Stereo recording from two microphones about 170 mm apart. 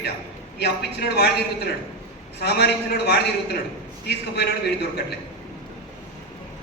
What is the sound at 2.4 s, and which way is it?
A man's voice, 80° left.